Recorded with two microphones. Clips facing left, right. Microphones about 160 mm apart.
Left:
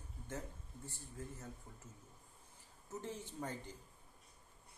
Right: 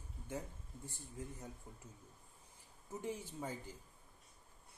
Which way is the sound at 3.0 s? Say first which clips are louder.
Right 2 dB; 10° right (ahead or behind).